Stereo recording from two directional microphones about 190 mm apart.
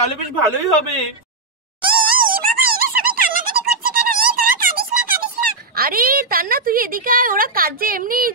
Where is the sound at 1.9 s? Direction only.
50° right (ahead or behind).